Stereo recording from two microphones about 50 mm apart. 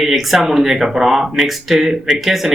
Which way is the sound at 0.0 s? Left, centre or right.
Centre.